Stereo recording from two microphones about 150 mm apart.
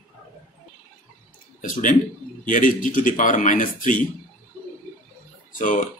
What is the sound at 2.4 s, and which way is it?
A man's voice, 60° left (ahead or behind).